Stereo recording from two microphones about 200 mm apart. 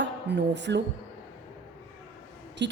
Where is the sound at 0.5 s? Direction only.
60° right (ahead or behind).